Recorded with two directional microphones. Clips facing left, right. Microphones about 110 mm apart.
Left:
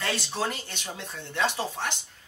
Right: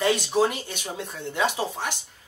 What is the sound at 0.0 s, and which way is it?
Speech, 15° right (ahead or behind).